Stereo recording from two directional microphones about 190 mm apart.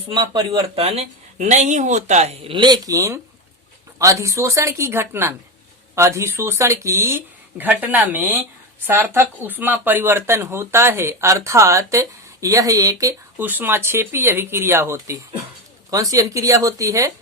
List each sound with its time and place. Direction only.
0.1 s speech: 20° right (ahead or behind)
0.8 s speech: 35° right (ahead or behind); by 17.1 s 15° right (ahead or behind)